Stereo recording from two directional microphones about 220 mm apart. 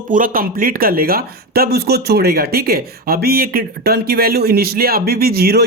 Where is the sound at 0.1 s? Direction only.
40° right (ahead or behind).